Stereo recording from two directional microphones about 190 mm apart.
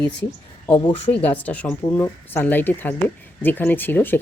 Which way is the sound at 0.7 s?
25° left (ahead or behind).